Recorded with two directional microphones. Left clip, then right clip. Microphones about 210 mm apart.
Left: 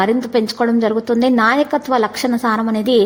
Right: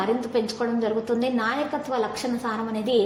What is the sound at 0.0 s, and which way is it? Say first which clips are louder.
A woman's voice: left 8 dB; 40° left (ahead or behind).